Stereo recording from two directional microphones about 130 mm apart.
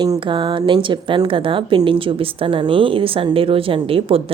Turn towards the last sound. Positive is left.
turn(degrees=-45)  # may be behind; listen again after turning